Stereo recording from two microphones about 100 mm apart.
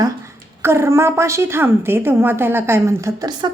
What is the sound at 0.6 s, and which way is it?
A woman's voice, 25° right (ahead or behind).